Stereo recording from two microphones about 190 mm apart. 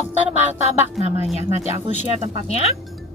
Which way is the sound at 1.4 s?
30° left (ahead or behind).